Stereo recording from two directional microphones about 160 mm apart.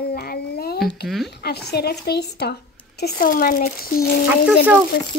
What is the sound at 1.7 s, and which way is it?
Speech, 85° left.